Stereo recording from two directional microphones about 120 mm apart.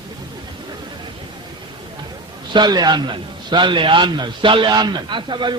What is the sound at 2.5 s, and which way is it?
A man's voice, 35° right (ahead or behind).